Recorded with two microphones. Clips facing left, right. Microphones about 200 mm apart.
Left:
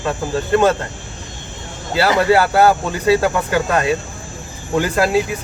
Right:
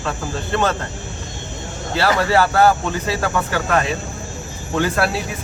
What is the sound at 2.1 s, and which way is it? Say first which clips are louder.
Speech: left 3 dB; 15° left (ahead or behind).